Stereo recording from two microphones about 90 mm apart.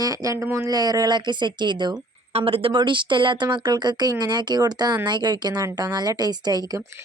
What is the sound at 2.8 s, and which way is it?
Speech, 65° right (ahead or behind).